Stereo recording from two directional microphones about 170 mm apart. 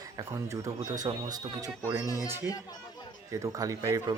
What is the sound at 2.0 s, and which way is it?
Speech, 20° left (ahead or behind).